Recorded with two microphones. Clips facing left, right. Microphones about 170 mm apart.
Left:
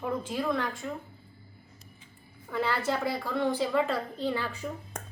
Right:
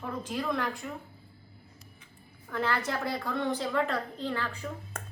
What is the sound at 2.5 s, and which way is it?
A woman's voice, 5° left (ahead or behind).